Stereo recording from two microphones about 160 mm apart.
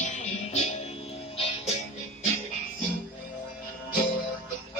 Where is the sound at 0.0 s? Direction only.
45° left (ahead or behind).